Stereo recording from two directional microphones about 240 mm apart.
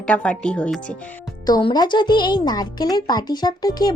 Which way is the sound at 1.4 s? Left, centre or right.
Centre.